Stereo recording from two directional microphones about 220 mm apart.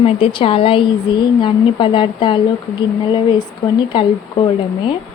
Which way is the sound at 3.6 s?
20° left (ahead or behind).